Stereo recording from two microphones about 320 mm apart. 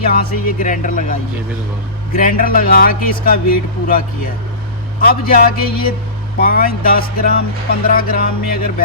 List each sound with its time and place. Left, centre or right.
0.1 s speech: left